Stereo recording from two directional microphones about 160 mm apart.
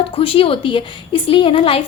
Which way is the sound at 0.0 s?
35° left (ahead or behind).